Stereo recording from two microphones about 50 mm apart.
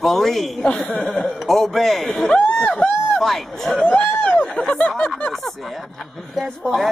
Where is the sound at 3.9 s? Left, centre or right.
Centre.